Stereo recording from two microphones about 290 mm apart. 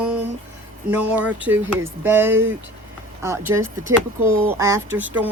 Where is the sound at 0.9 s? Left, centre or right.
Centre.